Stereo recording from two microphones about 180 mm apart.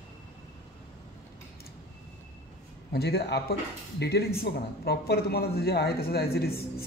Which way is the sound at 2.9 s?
65° left (ahead or behind).